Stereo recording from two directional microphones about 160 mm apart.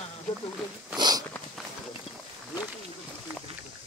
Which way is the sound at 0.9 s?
25° right (ahead or behind).